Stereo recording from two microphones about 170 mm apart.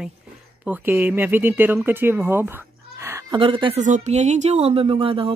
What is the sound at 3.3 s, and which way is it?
Speech, 30° right (ahead or behind).